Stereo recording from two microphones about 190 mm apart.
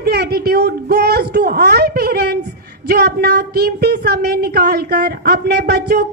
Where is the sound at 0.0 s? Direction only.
55° right (ahead or behind).